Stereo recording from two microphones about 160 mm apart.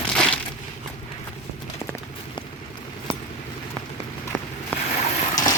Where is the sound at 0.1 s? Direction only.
5° left (ahead or behind).